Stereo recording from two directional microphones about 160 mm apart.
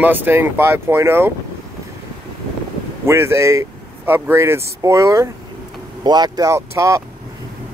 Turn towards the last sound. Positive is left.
turn(degrees=-20)  # may be behind; listen again after turning